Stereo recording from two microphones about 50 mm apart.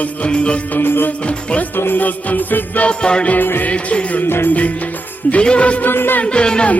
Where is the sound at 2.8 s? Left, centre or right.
Centre.